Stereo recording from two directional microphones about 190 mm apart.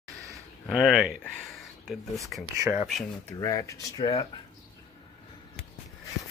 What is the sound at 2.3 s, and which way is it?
Speech, centre (ahead or behind).